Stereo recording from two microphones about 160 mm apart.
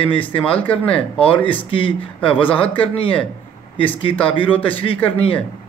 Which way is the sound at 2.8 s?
35° left (ahead or behind).